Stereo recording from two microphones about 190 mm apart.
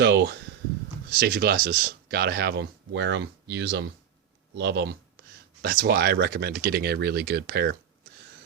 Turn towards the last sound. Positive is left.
turn(degrees=-60)  # may be behind; listen again after turning